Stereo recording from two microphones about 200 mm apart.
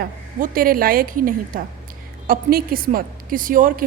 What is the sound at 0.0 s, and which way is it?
A woman's voice, 45° right (ahead or behind).